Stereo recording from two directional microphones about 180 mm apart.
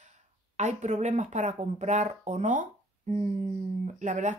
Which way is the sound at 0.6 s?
40° right (ahead or behind).